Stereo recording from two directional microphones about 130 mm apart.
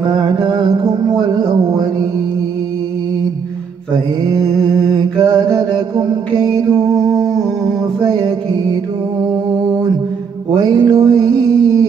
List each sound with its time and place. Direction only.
0.0 s music: 30° right (ahead or behind)
4.2 s mantra: 30° right (ahead or behind)
10.5 s mantra: 30° right (ahead or behind)